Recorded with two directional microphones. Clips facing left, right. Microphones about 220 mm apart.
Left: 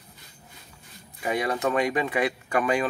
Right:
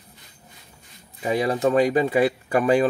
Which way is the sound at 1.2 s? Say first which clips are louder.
Right 5 dB; 30° right (ahead or behind).